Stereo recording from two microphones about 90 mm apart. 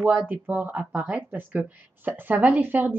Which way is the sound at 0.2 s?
15° right (ahead or behind).